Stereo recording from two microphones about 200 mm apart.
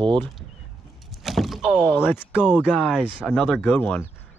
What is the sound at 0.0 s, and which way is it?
Speech, 25° right (ahead or behind).